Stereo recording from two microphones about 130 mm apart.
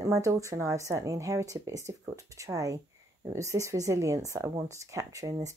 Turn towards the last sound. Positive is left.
turn(degrees=-25)  # may be behind; listen again after turning